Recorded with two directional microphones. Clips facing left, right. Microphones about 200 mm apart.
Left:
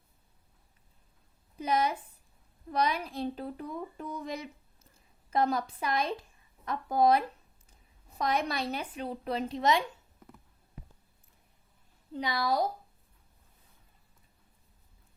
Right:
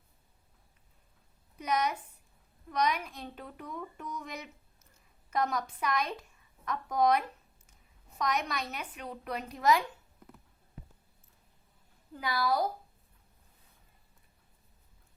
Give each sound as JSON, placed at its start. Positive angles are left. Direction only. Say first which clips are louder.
{"t": 1.5, "sound": "a woman's voice", "louder": "left 2 dB", "side_deg": 30}
{"t": 12.1, "sound": "speech", "louder": "left 1 dB", "side_deg": 20}